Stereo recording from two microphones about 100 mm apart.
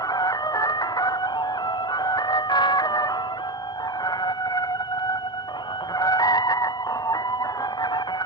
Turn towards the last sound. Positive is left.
turn(degrees=40)  # may be behind; listen again after turning